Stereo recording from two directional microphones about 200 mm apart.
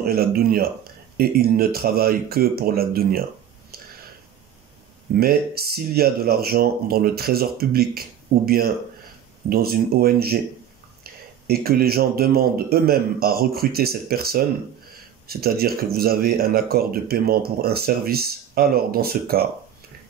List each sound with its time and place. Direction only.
0.0 s speech: 50° right (ahead or behind)
5.1 s speech: 50° right (ahead or behind)